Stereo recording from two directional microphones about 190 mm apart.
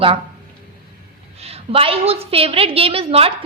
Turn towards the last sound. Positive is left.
turn(degrees=-30)  # may be behind; listen again after turning